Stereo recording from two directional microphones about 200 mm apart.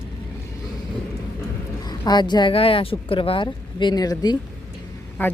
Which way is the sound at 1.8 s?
20° left (ahead or behind).